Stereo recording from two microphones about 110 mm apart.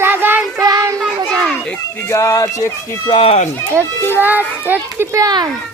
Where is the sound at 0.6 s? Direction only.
35° right (ahead or behind).